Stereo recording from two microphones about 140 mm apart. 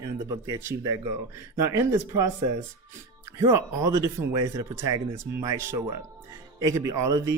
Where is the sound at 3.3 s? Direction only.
20° right (ahead or behind).